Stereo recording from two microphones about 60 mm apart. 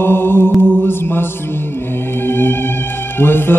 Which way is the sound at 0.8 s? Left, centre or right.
Left.